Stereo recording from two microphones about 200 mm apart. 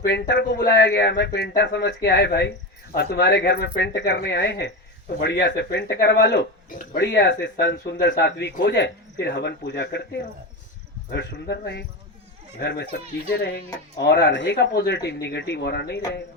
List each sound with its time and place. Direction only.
0.0 s speech: 55° left (ahead or behind)
11.1 s speech: 60° left (ahead or behind)